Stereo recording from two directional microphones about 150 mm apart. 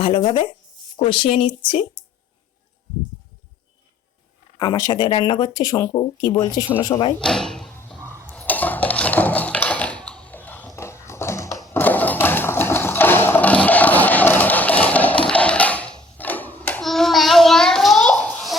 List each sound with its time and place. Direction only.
0.0 s speech: 40° left (ahead or behind)
4.6 s speech: 25° left (ahead or behind)
7.2 s speech: 5° left (ahead or behind)
8.3 s dishes: 10° left (ahead or behind)
10.8 s a sound: 20° left (ahead or behind)